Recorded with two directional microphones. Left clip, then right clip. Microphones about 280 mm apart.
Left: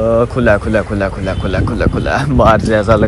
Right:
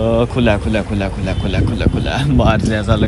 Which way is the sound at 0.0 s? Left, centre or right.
Centre.